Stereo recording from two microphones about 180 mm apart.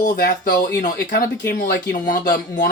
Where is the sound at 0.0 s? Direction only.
65° left (ahead or behind).